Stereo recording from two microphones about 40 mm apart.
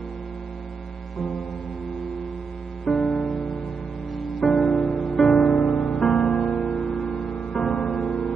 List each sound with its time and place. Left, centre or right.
2.8 s music: centre
5.5 s music: centre
5.9 s music: centre